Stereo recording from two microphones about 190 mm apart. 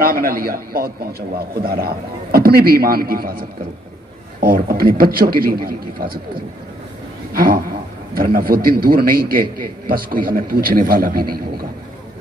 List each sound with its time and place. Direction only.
0.0 s a man's voice: 50° right (ahead or behind)
7.3 s a man's voice: 50° right (ahead or behind)